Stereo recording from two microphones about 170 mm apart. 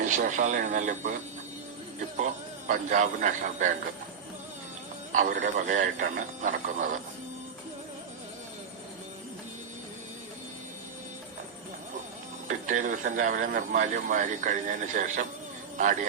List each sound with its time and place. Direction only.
0.0 s a man's voice: 45° right (ahead or behind)
2.6 s a man's voice: 50° right (ahead or behind)
5.1 s a man's voice: 50° right (ahead or behind)
12.5 s a man's voice: 50° right (ahead or behind)